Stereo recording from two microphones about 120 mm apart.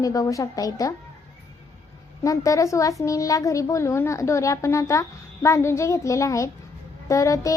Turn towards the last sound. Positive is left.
turn(degrees=25)  # may be behind; listen again after turning